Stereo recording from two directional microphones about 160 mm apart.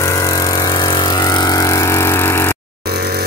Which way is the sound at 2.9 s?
70° right (ahead or behind).